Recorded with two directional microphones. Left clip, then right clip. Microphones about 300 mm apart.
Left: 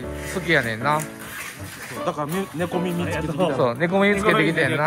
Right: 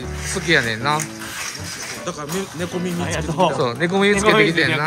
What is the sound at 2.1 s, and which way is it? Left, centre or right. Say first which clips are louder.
Speech: left 2 dB; left.